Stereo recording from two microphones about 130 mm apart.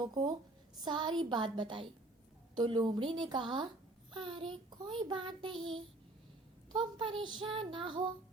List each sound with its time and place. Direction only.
0.0 s child singing: 35° right (ahead or behind)
6.7 s child singing: 40° right (ahead or behind)